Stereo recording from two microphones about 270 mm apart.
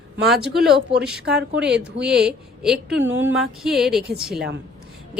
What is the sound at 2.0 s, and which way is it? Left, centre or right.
A woman's voice, centre.